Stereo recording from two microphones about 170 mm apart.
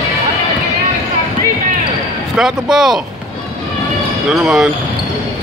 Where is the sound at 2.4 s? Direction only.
5° right (ahead or behind).